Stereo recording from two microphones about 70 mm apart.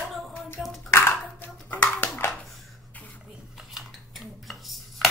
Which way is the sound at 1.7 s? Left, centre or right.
Left.